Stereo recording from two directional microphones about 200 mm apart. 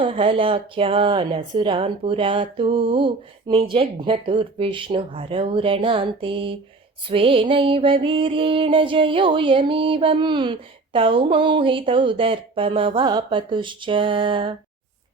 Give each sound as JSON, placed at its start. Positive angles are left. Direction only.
{"t": 0.0, "sound": "music", "side_deg": -25}